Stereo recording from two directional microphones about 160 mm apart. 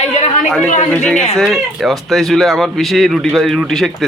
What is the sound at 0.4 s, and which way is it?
Speech, 5° left (ahead or behind).